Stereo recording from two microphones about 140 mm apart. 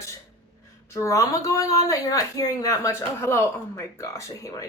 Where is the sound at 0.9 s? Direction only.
25° left (ahead or behind).